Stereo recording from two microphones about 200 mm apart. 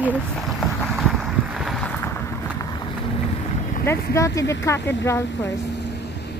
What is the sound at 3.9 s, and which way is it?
Speech, 15° left (ahead or behind).